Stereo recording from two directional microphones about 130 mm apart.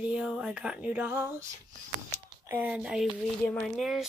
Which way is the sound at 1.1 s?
20° right (ahead or behind).